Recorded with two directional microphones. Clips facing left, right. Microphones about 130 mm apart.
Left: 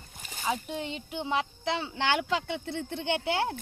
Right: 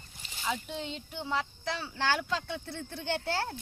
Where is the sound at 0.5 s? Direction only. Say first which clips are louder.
Left 3 dB; 55° left (ahead or behind).